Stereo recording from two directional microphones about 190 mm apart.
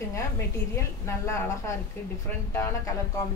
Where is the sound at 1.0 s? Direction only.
15° left (ahead or behind).